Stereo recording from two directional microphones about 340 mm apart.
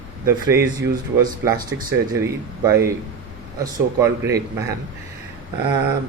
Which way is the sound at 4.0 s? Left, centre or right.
Centre.